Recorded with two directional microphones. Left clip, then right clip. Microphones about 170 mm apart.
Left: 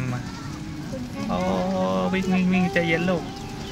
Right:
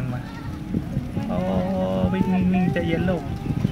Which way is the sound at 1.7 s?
Centre (ahead or behind).